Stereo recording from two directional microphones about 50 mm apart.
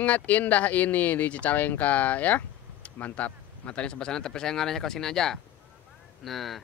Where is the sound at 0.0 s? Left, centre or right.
Left.